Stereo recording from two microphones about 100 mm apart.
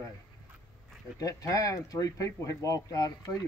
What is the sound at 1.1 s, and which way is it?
Speech, 35° left (ahead or behind).